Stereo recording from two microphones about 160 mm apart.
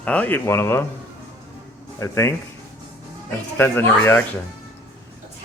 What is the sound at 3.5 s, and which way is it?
Speech, 10° left (ahead or behind).